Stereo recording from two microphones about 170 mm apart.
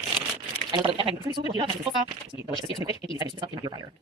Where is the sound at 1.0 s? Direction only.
30° right (ahead or behind).